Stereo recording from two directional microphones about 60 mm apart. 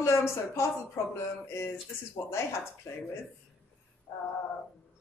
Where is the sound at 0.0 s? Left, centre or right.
Left.